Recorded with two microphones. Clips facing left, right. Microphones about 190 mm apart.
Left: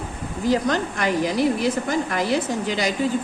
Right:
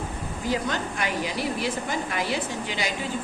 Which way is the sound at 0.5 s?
40° left (ahead or behind).